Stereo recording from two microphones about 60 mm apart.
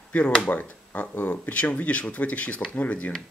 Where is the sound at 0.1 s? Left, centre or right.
Centre.